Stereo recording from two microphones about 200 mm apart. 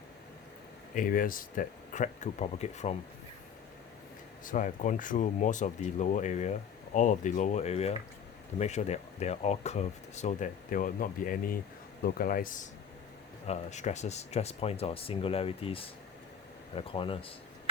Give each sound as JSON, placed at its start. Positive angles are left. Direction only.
{"t": 0.9, "sound": "speech", "side_deg": 45}
{"t": 4.4, "sound": "speech", "side_deg": 40}